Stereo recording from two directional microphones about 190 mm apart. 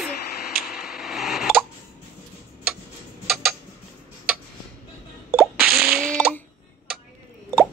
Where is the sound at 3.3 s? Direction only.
5° right (ahead or behind).